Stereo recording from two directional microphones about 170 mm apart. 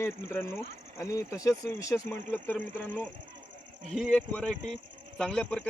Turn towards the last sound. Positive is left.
turn(degrees=5)  # may be behind; listen again after turning